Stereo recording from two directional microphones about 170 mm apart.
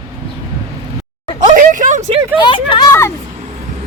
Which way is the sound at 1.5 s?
50° right (ahead or behind).